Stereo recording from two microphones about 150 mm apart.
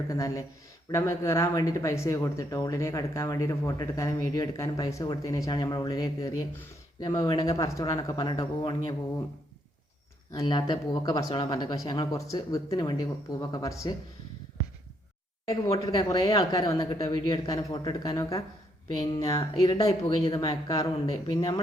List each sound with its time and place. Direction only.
0.1 s speech: 20° left (ahead or behind)
10.3 s speech: 30° left (ahead or behind)
15.4 s speech: 25° left (ahead or behind)